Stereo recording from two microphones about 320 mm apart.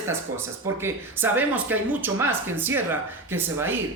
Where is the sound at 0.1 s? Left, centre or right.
Centre.